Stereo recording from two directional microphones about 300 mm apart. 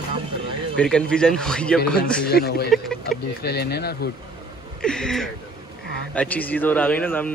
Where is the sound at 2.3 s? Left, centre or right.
Left.